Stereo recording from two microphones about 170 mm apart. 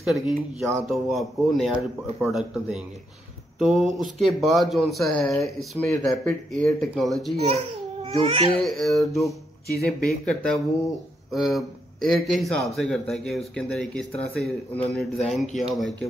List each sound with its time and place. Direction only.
0.0 s speech: centre (ahead or behind)
7.4 s speech: 35° right (ahead or behind)
8.5 s speech: centre (ahead or behind)